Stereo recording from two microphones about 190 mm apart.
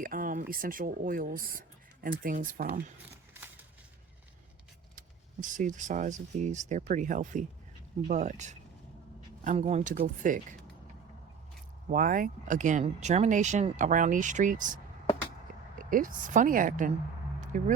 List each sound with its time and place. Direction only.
0.0 s speech: 45° right (ahead or behind)
4.9 s speech: 45° right (ahead or behind)
11.9 s speech: 45° right (ahead or behind)
15.8 s speech: 45° right (ahead or behind)